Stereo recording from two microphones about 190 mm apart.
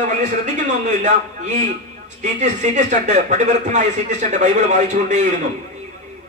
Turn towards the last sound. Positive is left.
turn(degrees=-40)  # may be behind; listen again after turning